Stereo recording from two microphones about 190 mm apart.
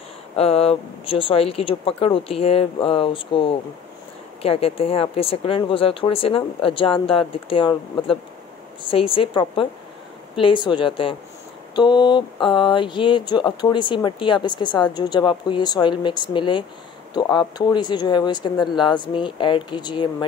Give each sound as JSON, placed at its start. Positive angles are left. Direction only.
{"t": 0.4, "sound": "speech", "side_deg": 30}